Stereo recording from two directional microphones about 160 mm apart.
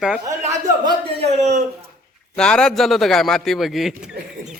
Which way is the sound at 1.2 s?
45° right (ahead or behind).